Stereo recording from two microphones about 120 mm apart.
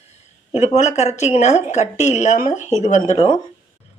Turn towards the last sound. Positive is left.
turn(degrees=45)  # may be behind; listen again after turning